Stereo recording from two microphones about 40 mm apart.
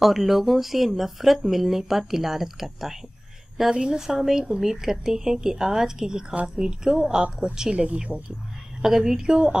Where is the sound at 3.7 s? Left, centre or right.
Centre.